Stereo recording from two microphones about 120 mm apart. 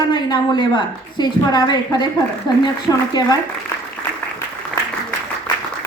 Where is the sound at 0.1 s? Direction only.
40° left (ahead or behind).